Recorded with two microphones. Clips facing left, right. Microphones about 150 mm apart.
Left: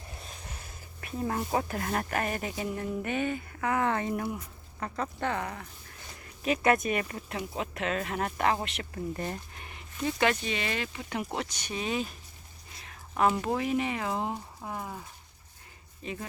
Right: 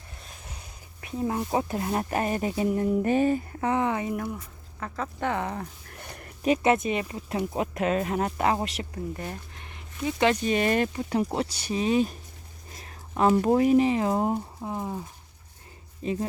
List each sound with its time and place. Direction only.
0.5 s speech: 15° right (ahead or behind)
3.8 s speech: 10° right (ahead or behind)
5.2 s speech: 20° right (ahead or behind)
6.0 s a sound: 60° right (ahead or behind)
6.4 s speech: 30° right (ahead or behind)
7.3 s speech: 40° right (ahead or behind)
9.1 s speech: centre (ahead or behind)
10.4 s speech: 45° right (ahead or behind)
11.1 s speech: 30° right (ahead or behind)
14.3 s speech: 20° right (ahead or behind)
16.0 s speech: 35° right (ahead or behind)